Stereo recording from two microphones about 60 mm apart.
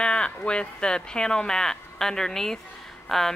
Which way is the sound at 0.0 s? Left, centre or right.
Centre.